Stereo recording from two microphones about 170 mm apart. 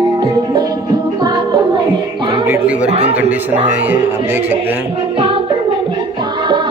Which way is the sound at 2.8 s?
40° right (ahead or behind).